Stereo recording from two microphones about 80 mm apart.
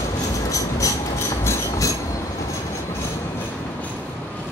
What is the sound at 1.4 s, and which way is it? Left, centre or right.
Train, left.